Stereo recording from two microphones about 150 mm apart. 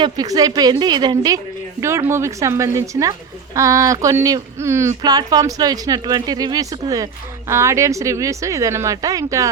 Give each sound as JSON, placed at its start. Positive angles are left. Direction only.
{"t": 0.0, "sound": "speech", "side_deg": -25}